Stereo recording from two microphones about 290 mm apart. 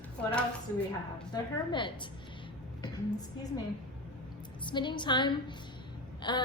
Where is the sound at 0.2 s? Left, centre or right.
Centre.